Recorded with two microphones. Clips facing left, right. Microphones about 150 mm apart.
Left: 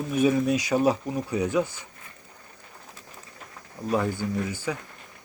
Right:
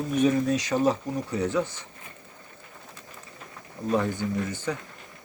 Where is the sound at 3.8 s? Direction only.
10° left (ahead or behind).